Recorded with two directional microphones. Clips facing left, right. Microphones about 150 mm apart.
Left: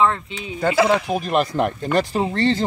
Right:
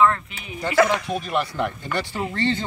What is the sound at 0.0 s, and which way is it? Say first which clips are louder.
Speech: even; 25° left (ahead or behind).